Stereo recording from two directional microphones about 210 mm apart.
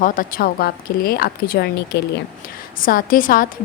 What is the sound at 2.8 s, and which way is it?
Speech, 40° left (ahead or behind).